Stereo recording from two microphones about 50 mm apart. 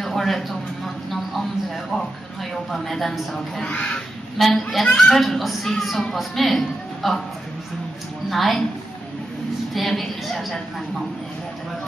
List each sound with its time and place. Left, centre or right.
0.0 s a sound: centre
2.7 s speech: centre
3.6 s speech: left
4.6 s speech: centre
8.3 s speech: centre
9.8 s speech: centre